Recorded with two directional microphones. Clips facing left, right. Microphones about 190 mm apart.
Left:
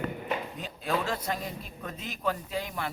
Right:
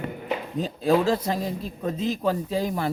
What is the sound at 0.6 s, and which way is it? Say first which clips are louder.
A man's voice: right 12 dB; 35° right (ahead or behind).